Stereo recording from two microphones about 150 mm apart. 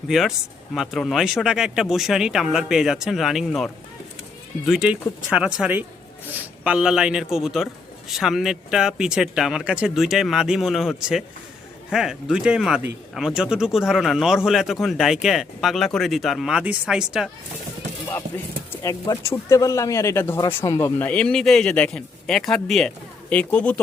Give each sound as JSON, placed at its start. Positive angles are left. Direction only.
{"t": 0.1, "sound": "a man's voice", "side_deg": 0}
{"t": 18.7, "sound": "speech", "side_deg": 20}
{"t": 21.0, "sound": "a man's voice", "side_deg": 10}